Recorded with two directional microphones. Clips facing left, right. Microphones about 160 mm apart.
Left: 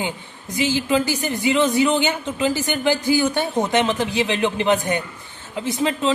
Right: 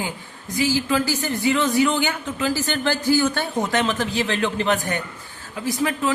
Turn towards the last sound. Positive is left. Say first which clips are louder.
# left 1 dB
turn(degrees=25)  # may be behind; listen again after turning